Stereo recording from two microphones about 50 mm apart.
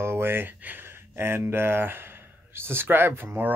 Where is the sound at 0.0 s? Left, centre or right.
Right.